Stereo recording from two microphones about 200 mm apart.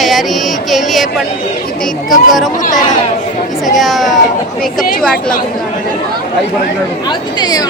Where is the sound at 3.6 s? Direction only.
Centre (ahead or behind).